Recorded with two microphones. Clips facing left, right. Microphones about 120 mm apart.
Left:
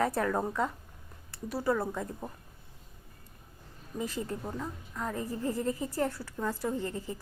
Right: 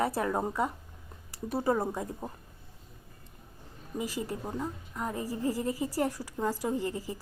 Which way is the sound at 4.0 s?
5° right (ahead or behind).